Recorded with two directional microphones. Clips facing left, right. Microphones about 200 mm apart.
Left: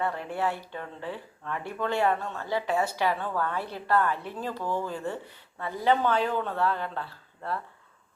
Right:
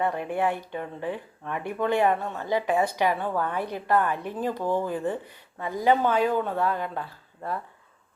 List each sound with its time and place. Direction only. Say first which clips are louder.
0.0 s speech: right 4 dB; 15° right (ahead or behind)